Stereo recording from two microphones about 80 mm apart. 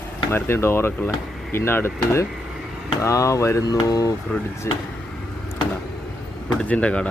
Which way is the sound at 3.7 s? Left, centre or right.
Left.